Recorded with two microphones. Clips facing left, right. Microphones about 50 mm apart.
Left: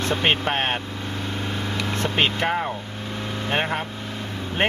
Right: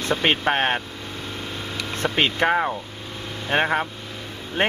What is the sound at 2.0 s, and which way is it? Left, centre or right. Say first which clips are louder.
Speech: right 3 dB; right.